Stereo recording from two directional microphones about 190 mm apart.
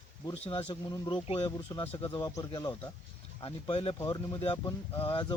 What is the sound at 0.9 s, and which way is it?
Speech, 20° left (ahead or behind).